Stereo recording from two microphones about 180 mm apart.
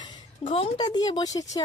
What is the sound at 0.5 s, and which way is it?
Speech, 30° left (ahead or behind).